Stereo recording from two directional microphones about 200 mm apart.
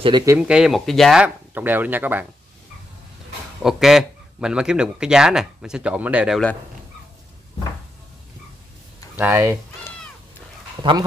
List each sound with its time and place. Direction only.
0.0 s speech: 20° right (ahead or behind)
0.4 s speech: 5° right (ahead or behind)
3.6 s speech: centre (ahead or behind)
9.2 s speech: 10° right (ahead or behind)
10.8 s speech: 25° right (ahead or behind)